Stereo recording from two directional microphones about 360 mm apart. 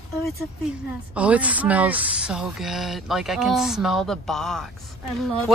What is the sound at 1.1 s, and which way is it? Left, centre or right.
Speech, centre.